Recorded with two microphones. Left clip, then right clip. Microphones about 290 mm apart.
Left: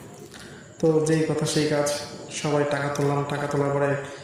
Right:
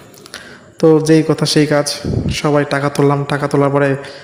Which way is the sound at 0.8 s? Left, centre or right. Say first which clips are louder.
Right 11 dB; right.